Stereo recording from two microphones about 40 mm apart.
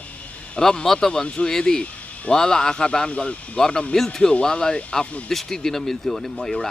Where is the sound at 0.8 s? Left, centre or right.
Centre; by 3.3 s left.